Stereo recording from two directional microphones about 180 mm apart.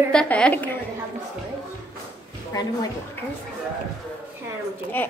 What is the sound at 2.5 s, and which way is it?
Speech, 20° left (ahead or behind).